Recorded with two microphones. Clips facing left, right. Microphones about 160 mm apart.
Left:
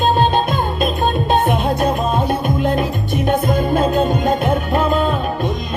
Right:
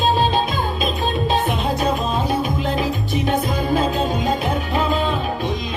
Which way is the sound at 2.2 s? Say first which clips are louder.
Left 3 dB; centre (ahead or behind).